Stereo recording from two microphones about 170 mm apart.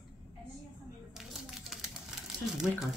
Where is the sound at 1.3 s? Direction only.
Centre (ahead or behind).